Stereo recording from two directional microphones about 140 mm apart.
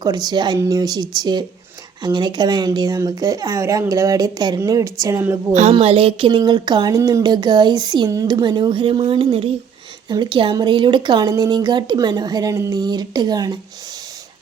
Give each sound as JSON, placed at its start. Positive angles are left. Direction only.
{"t": 0.0, "sound": "speech", "side_deg": -30}
{"t": 5.8, "sound": "speech", "side_deg": -45}